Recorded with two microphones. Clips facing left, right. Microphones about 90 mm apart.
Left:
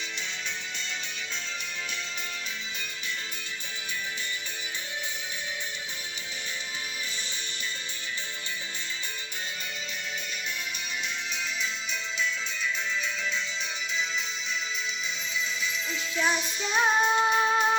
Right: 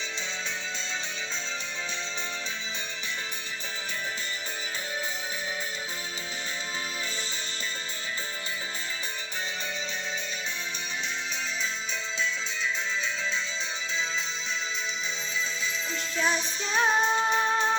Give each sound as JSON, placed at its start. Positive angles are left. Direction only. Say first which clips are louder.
{"t": 15.6, "sound": "music", "louder": "even", "side_deg": -30}
{"t": 16.6, "sound": "music", "louder": "left 1 dB", "side_deg": 5}